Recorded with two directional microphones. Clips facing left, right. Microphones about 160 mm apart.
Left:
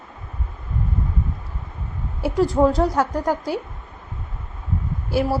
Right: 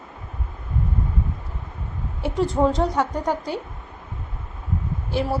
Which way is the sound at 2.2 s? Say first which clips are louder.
Left 3 dB; centre (ahead or behind).